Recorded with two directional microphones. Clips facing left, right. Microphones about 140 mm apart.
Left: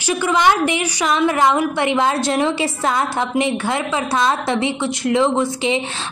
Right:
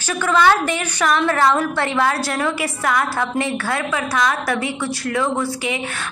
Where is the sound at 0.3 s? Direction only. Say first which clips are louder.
Right 1 dB; 15° left (ahead or behind).